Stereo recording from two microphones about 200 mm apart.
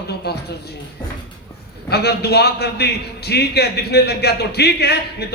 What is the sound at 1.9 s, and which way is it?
A man's voice, 55° left (ahead or behind).